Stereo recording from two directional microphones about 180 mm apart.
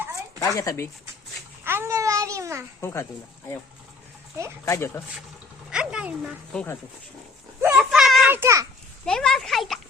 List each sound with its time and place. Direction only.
0.4 s speech: 20° left (ahead or behind)
1.6 s a child's voice: 15° right (ahead or behind)
2.8 s speech: 15° left (ahead or behind)
4.6 s speech: 15° left (ahead or behind)
5.7 s a sound: 5° right (ahead or behind)
6.5 s a child's voice: 5° left (ahead or behind)
7.8 s a sound: centre (ahead or behind)
8.4 s a child's voice: 15° right (ahead or behind)
9.0 s a child's voice: 5° left (ahead or behind)